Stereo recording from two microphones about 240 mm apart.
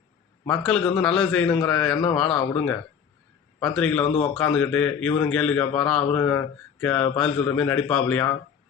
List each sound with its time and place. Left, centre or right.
0.4 s a man's voice: centre
3.8 s a man's voice: centre
4.0 s speech: left
4.4 s a man's voice: centre